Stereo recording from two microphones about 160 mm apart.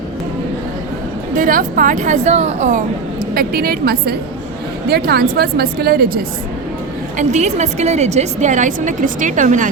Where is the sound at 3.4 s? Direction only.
70° right (ahead or behind).